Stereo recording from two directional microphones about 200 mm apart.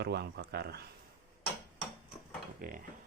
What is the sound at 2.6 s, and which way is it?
Dishes, 45° right (ahead or behind).